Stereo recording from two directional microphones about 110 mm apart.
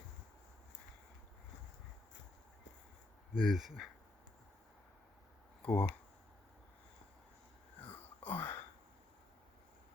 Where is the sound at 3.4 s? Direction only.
Centre (ahead or behind).